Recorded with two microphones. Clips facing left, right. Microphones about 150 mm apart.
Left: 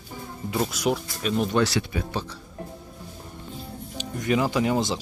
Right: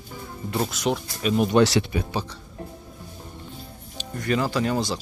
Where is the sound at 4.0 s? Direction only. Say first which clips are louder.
Left 1 dB; 15° left (ahead or behind).